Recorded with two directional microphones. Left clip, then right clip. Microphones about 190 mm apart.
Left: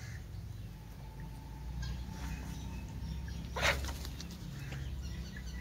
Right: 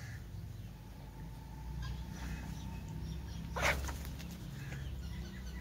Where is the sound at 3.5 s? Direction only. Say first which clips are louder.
Left 2 dB; 5° left (ahead or behind).